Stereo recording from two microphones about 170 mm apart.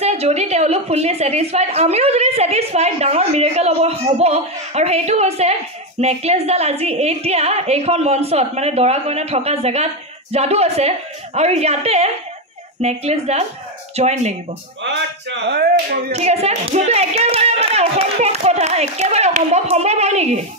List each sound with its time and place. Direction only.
0.0 s a woman's voice: 40° right (ahead or behind)
14.8 s speech: 90° right; by 16.0 s 70° right (ahead or behind)
16.1 s a woman's voice: 40° right (ahead or behind)